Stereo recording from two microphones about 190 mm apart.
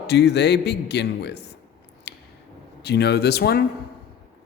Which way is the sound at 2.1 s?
60° left (ahead or behind).